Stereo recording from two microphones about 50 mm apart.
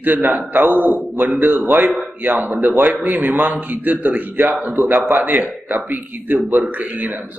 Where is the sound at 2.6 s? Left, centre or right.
Right.